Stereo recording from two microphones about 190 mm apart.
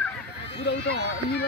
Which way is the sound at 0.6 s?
60° left (ahead or behind).